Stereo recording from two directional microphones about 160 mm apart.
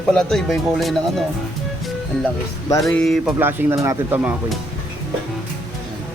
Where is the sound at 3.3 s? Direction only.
15° right (ahead or behind).